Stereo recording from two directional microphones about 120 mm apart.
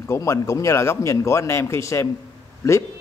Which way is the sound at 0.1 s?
25° left (ahead or behind).